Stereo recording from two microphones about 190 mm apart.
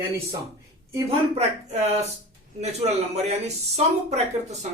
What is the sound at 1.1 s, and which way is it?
Speech, 35° right (ahead or behind).